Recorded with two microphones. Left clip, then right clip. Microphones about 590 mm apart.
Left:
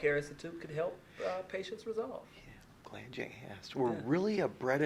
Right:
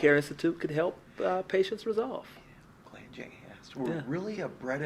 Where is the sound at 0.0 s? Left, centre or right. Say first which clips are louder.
Right 9 dB; centre.